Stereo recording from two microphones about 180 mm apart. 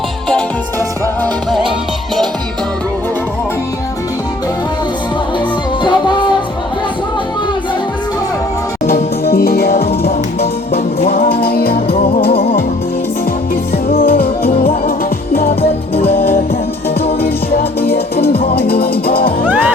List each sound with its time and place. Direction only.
5.8 s music: 25° left (ahead or behind)
9.2 s music: 55° left (ahead or behind)
11.1 s music: 60° left (ahead or behind)
11.9 s music: 35° left (ahead or behind)
14.0 s music: 55° left (ahead or behind)
15.6 s music: 35° left (ahead or behind)
17.2 s music: 60° left (ahead or behind)